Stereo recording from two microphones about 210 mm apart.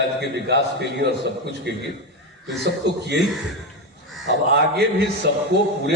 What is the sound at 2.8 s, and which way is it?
Speech, 55° right (ahead or behind).